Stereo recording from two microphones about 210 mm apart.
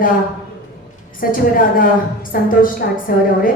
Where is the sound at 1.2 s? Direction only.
40° left (ahead or behind).